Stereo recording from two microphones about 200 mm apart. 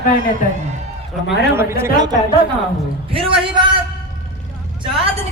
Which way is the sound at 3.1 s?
25° right (ahead or behind).